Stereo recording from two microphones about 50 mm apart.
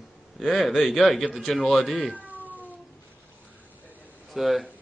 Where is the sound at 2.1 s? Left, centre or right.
Right.